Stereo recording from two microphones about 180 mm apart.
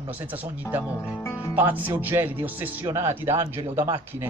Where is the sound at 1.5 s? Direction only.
10° right (ahead or behind).